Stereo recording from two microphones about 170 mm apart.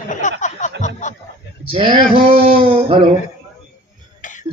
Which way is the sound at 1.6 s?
30° right (ahead or behind).